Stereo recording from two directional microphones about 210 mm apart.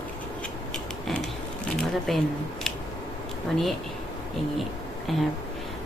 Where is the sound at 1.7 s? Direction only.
Centre (ahead or behind).